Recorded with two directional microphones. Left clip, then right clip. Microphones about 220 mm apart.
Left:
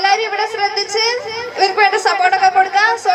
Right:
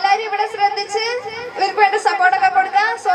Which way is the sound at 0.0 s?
25° left (ahead or behind).